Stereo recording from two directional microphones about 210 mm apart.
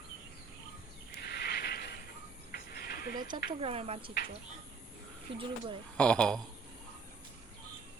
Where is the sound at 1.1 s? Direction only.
50° left (ahead or behind).